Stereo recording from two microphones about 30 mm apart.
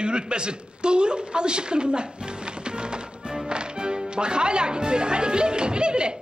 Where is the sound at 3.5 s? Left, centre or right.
Right.